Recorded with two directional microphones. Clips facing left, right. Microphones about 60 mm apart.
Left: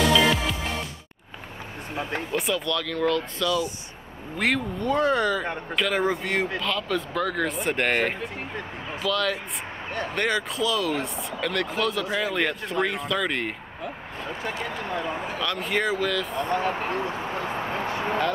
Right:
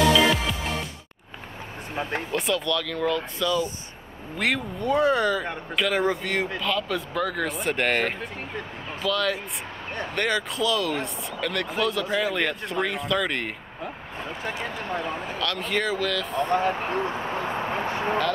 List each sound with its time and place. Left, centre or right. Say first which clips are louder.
2.3 s speech: right 1 dB; centre
4.4 s speech: left 1 dB; centre
6.6 s speech: even; centre
10.1 s speech: right 1 dB; centre
15.3 s speech: even; centre
16.3 s speech: right 5 dB; right
16.9 s a sound: right 1 dB; right